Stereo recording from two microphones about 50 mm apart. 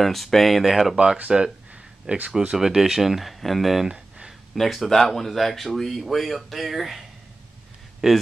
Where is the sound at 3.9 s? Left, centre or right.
Centre.